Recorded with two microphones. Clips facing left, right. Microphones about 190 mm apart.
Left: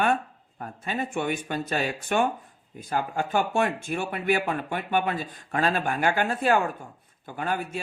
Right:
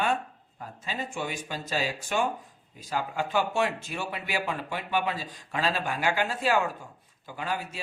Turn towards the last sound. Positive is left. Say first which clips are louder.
# left 4 dB
turn(degrees=55)  # may be behind; listen again after turning